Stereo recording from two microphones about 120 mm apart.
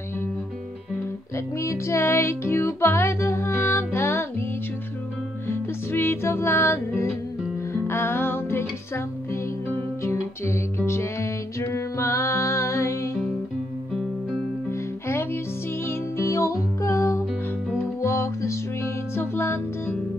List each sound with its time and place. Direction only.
1.6 s music: 25° left (ahead or behind)
5.5 s music: 20° left (ahead or behind)
14.7 s music: 20° left (ahead or behind)